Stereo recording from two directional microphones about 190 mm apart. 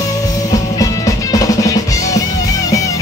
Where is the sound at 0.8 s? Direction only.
20° left (ahead or behind).